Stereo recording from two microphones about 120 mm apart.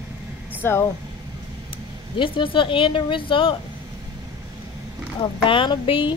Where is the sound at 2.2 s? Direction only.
45° left (ahead or behind).